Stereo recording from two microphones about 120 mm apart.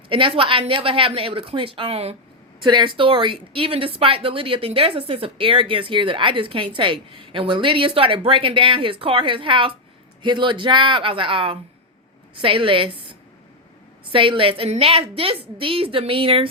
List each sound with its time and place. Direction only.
0.1 s speech: 45° right (ahead or behind)
2.6 s speech: 40° right (ahead or behind)